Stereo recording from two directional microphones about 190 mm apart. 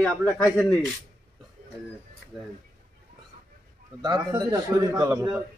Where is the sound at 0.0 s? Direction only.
5° left (ahead or behind).